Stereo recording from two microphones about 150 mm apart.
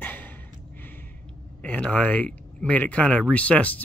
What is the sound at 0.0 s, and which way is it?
Gasp, 10° left (ahead or behind).